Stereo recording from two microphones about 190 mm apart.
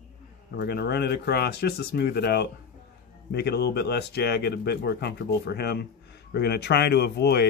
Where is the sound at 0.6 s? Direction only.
55° left (ahead or behind).